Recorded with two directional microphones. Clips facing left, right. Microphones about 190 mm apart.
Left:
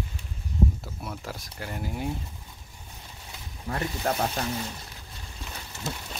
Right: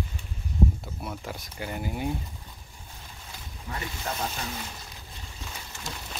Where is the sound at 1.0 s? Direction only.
Centre (ahead or behind).